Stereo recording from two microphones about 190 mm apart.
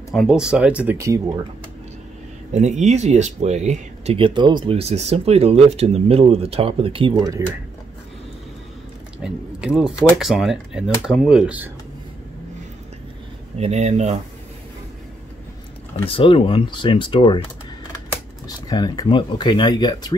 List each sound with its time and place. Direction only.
0.1 s speech: centre (ahead or behind)
2.5 s speech: 40° right (ahead or behind); by 7.4 s 20° right (ahead or behind)
9.2 s speech: 5° right (ahead or behind)
13.6 s speech: 35° right (ahead or behind)
16.1 s speech: 30° left (ahead or behind)
18.7 s speech: 20° left (ahead or behind)